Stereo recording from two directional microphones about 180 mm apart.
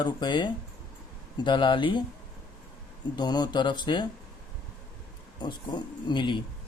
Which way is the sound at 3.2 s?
25° left (ahead or behind).